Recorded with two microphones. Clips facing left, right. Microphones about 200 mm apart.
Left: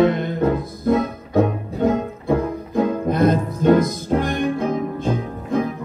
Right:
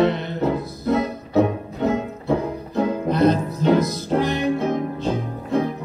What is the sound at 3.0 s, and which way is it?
Music, 50° left (ahead or behind).